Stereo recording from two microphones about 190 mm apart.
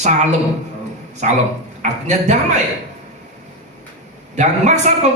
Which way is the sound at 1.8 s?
40° right (ahead or behind).